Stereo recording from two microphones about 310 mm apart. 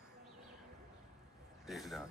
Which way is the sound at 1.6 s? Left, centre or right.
Centre.